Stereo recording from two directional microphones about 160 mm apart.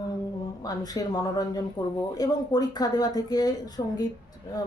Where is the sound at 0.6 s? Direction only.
25° left (ahead or behind).